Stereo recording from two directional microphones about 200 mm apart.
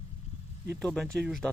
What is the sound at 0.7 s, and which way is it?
Speech, 5° left (ahead or behind).